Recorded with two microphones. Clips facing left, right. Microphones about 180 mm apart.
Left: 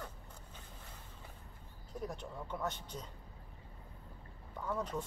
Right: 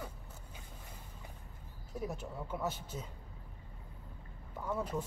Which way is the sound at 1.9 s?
5° right (ahead or behind).